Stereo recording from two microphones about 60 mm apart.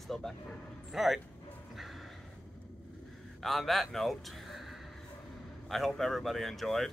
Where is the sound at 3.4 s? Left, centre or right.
Centre.